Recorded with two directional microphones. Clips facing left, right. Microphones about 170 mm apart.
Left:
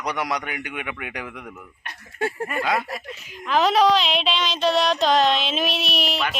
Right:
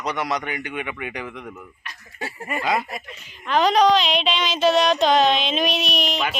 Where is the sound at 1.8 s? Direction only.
55° left (ahead or behind).